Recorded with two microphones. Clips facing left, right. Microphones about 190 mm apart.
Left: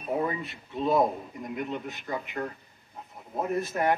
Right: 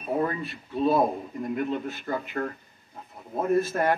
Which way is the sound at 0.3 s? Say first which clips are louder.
Right 2 dB; 20° left (ahead or behind).